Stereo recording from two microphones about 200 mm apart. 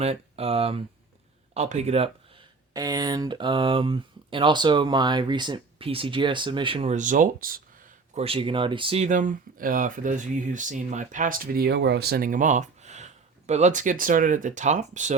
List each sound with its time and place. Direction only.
0.0 s speech: 30° right (ahead or behind)
2.7 s speech: 20° right (ahead or behind); by 7.6 s 45° right (ahead or behind)
8.1 s speech: 30° right (ahead or behind)